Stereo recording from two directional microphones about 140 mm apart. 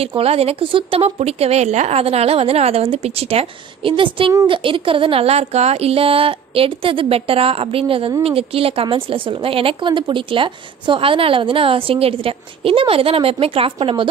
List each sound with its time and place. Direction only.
0.0 s a woman's voice: 45° right (ahead or behind)